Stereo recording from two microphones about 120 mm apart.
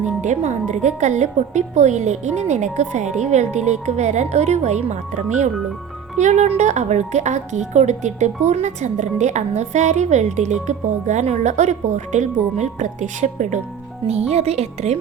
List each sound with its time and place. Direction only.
0.0 s a woman's voice: 80° right
14.1 s speech: 60° right (ahead or behind)